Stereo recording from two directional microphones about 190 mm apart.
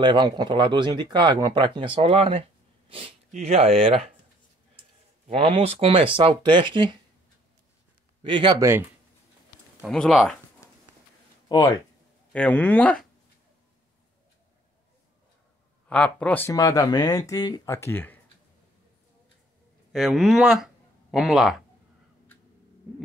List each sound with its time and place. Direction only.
0.0 s speech: 25° right (ahead or behind)
5.3 s speech: 30° right (ahead or behind)
8.2 s speech: 25° right (ahead or behind)
9.8 s speech: centre (ahead or behind)
11.4 s speech: 20° left (ahead or behind)
12.3 s speech: 5° left (ahead or behind)
15.9 s speech: 5° left (ahead or behind)
19.9 s speech: centre (ahead or behind)